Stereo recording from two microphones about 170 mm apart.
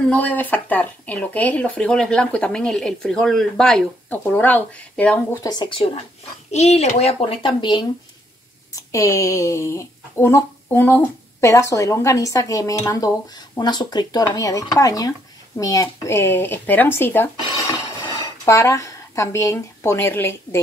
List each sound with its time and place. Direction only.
0.1 s speech: 10° left (ahead or behind)
5.4 s a child's voice: 25° left (ahead or behind)
8.9 s speech: 20° left (ahead or behind)
18.4 s speech: 20° left (ahead or behind)